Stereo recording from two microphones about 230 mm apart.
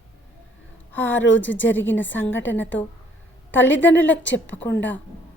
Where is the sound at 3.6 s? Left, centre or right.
Left.